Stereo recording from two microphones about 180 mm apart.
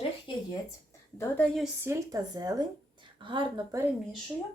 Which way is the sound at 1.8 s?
15° right (ahead or behind).